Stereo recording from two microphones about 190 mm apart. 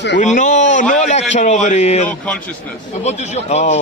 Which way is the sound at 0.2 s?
40° left (ahead or behind).